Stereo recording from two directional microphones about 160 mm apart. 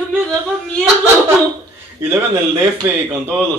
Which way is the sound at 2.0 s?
15° right (ahead or behind).